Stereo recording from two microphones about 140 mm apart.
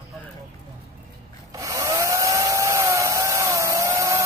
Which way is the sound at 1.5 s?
25° right (ahead or behind).